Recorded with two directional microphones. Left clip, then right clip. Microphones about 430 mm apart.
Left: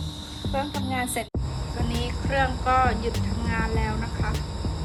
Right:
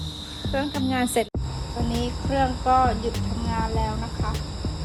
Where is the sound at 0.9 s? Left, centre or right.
Right.